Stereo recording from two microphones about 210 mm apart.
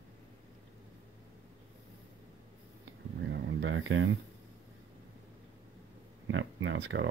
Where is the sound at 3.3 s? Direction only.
60° right (ahead or behind).